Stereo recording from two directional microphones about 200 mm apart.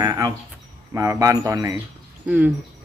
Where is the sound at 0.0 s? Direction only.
20° right (ahead or behind).